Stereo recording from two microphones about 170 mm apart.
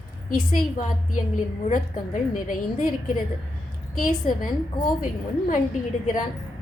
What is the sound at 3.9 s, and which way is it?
Speech, 55° left (ahead or behind).